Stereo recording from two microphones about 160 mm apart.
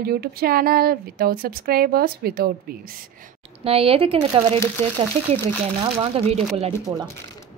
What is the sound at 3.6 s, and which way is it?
Speech, 35° right (ahead or behind).